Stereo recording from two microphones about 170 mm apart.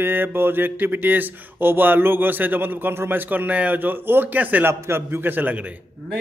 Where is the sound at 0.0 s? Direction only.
10° right (ahead or behind).